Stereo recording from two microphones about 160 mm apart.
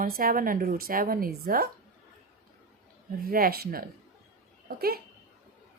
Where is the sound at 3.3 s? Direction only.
65° right (ahead or behind).